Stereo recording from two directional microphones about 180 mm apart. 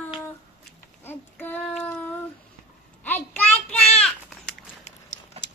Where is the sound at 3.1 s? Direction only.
10° left (ahead or behind).